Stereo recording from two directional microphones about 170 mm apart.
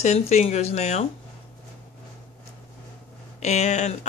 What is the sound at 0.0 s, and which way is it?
Speech, 40° left (ahead or behind).